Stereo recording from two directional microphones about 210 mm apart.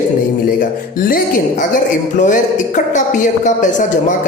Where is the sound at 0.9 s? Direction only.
40° left (ahead or behind).